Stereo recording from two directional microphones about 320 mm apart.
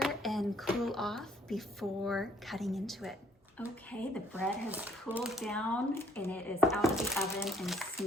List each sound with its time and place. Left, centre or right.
0.0 s speech: centre